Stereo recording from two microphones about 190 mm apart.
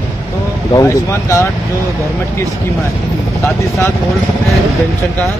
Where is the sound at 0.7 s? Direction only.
15° left (ahead or behind).